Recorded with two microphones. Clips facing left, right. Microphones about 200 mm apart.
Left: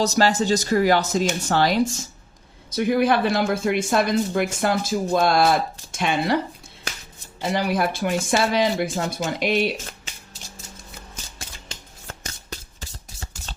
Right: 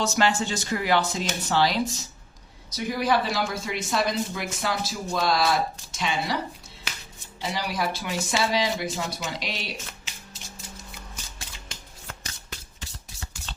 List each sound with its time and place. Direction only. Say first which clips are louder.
0.0 s a woman's voice: left 4 dB; 40° left (ahead or behind); by 6.3 s 55° left (ahead or behind)
7.4 s a woman's voice: left 6 dB; 55° left (ahead or behind)